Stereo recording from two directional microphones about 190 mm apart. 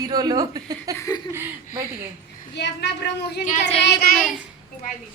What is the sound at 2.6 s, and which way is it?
Child singing, 65° left (ahead or behind).